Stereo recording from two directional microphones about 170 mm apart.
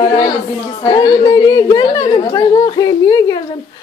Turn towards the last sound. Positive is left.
turn(degrees=20)  # may be behind; listen again after turning